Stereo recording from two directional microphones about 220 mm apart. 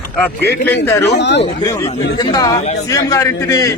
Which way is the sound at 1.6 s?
15° left (ahead or behind).